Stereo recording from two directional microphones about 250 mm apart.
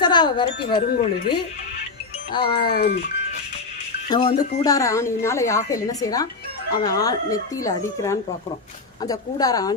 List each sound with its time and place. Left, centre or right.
0.0 s speech: centre
0.9 s speech: left
2.3 s speech: centre
2.6 s speech: left
4.1 s a woman's voice: centre